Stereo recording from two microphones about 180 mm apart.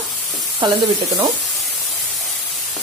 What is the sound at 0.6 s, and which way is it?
Speech, 25° right (ahead or behind).